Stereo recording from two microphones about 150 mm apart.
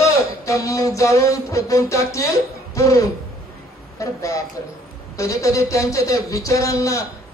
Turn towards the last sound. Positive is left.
turn(degrees=20)  # may be behind; listen again after turning